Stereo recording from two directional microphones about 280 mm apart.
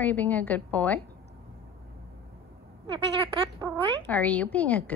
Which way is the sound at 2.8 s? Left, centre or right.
Centre.